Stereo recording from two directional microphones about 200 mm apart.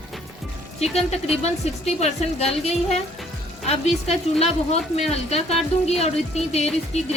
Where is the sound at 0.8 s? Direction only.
30° left (ahead or behind).